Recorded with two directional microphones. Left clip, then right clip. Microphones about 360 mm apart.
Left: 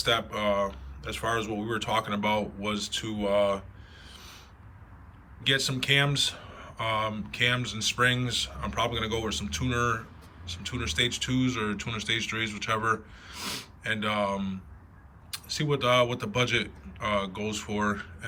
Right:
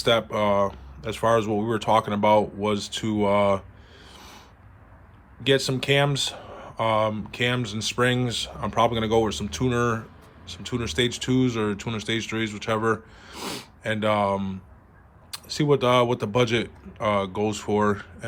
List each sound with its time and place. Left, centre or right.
0.0 s speech: centre
4.0 s a sound: centre
5.4 s speech: centre